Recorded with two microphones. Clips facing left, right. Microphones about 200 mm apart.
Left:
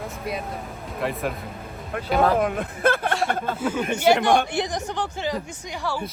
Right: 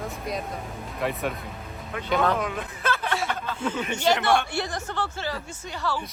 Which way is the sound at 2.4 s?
50° left (ahead or behind).